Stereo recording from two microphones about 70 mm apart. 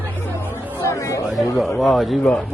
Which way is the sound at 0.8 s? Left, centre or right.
Left.